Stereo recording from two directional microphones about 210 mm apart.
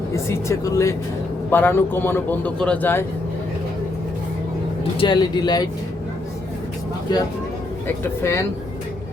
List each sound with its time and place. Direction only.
0.1 s a man's voice: 15° left (ahead or behind)
4.9 s speech: 20° left (ahead or behind)
7.9 s a man's voice: 10° left (ahead or behind)